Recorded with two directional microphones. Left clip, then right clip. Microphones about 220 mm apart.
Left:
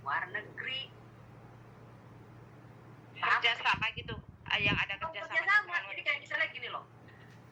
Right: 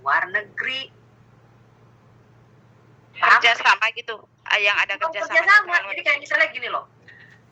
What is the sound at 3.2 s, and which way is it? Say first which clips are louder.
Speech: right 14 dB; 40° right (ahead or behind).